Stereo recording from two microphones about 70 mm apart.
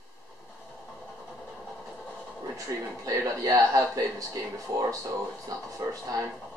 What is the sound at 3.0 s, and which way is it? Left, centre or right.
Speech, right.